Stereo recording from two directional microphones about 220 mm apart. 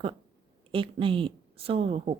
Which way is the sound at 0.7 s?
25° right (ahead or behind).